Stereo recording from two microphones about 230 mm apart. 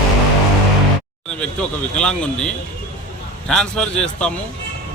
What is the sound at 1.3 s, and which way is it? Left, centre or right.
A man's voice, centre.